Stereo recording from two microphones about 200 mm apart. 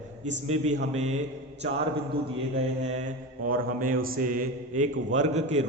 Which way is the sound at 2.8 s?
35° right (ahead or behind).